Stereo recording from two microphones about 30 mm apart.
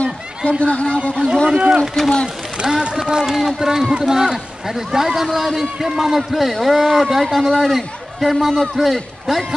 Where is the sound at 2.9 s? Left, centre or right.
Centre.